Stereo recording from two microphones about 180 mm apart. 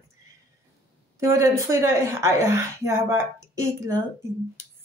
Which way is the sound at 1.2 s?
15° right (ahead or behind).